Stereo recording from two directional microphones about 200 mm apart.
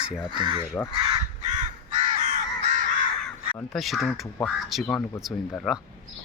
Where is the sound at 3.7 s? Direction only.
Centre (ahead or behind).